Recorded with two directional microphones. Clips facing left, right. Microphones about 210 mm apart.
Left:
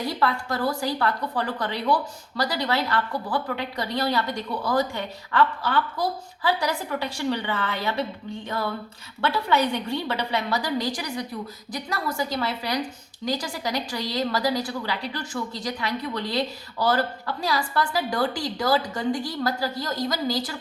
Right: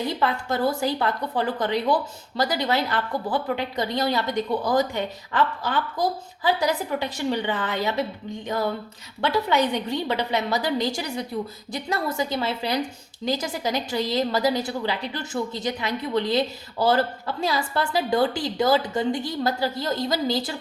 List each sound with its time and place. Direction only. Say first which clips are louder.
0.0 s a woman's voice: right 1 dB; 20° right (ahead or behind)